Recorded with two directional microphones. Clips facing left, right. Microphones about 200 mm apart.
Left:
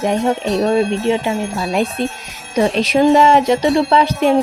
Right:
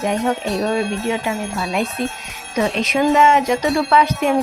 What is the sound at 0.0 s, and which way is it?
Bell, 30° left (ahead or behind).